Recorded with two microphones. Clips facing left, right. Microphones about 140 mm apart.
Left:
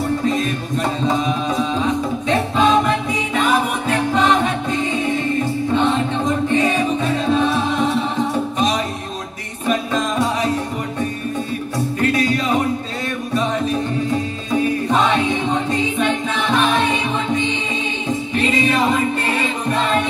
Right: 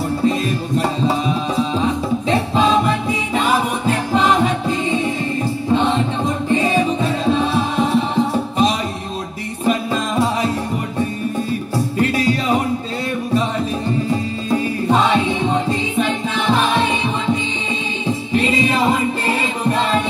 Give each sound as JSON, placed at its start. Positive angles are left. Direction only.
{"t": 2.2, "sound": "music", "side_deg": -30}
{"t": 6.5, "sound": "music", "side_deg": -35}
{"t": 12.0, "sound": "music", "side_deg": -30}